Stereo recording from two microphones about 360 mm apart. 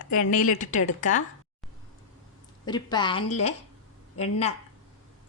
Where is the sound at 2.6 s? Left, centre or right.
Centre.